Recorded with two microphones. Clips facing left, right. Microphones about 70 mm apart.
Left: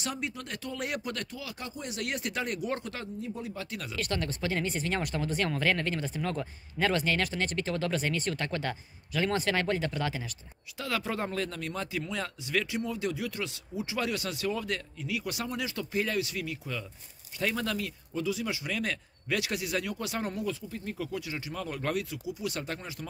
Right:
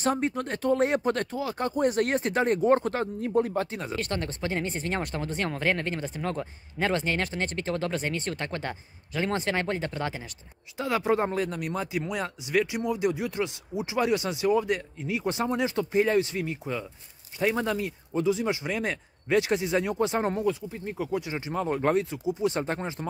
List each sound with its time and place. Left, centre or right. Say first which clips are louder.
0.0 s speech: right 9 dB; right
3.2 s speech: right 11 dB; right
3.7 s speech: right 3 dB; right